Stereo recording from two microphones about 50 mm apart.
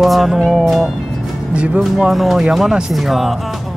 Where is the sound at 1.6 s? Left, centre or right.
Centre.